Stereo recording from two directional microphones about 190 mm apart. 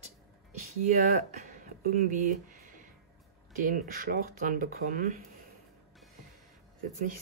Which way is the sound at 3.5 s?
45° right (ahead or behind).